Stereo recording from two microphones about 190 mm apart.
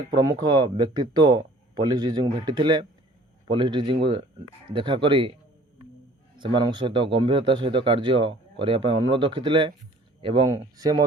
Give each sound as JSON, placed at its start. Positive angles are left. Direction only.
{"t": 0.1, "sound": "speech", "side_deg": -20}
{"t": 6.4, "sound": "speech", "side_deg": -25}